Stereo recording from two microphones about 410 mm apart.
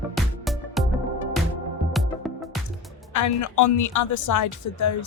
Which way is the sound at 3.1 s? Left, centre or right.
Left.